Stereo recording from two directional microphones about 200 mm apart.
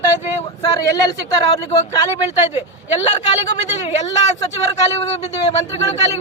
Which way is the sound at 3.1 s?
35° left (ahead or behind).